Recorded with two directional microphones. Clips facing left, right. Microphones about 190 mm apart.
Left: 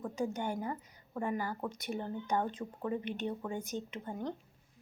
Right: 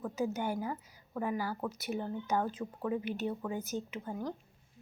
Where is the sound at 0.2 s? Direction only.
5° right (ahead or behind).